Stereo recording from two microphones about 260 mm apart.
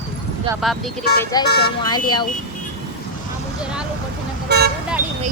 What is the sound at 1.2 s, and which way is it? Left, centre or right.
Speech, centre.